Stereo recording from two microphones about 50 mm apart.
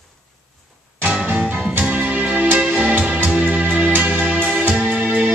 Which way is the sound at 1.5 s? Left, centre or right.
Right.